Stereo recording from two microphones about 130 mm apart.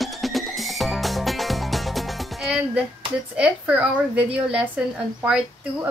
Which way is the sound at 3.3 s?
10° right (ahead or behind).